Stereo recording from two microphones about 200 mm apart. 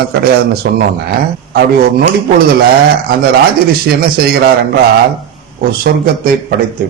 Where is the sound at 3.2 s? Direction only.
50° right (ahead or behind).